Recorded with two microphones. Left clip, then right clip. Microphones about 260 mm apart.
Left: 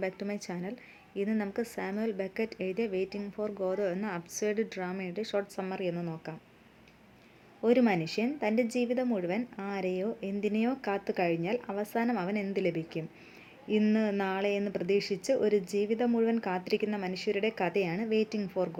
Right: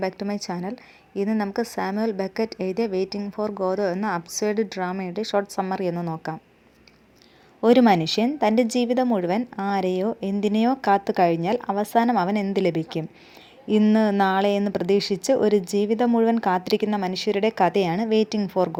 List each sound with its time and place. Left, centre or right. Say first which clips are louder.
0.0 s a woman's voice: right 8 dB; right
7.6 s a woman's voice: right 10 dB; right